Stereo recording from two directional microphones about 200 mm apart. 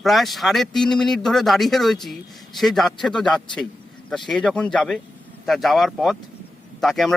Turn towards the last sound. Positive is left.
turn(degrees=0)  # may be behind; listen again after turning